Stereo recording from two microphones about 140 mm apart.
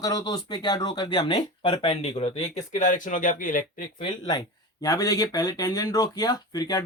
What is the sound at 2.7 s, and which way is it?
Speech, 60° left (ahead or behind).